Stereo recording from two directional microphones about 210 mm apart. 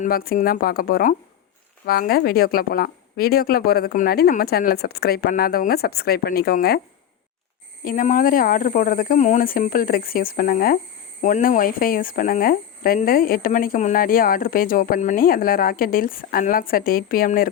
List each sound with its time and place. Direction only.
0.0 s speech: 45° left (ahead or behind)
7.9 s speech: 40° left (ahead or behind)